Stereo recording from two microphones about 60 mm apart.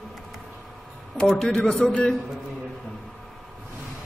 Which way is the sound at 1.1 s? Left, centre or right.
Centre.